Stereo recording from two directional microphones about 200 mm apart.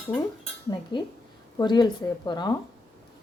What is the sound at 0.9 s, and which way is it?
Speech, 20° left (ahead or behind).